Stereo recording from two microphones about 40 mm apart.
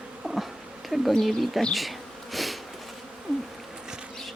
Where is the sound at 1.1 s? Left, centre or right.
Centre.